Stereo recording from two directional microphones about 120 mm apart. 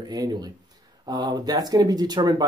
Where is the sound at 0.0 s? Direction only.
35° right (ahead or behind).